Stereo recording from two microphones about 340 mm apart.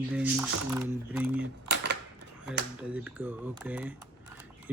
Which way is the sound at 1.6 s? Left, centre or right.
Right.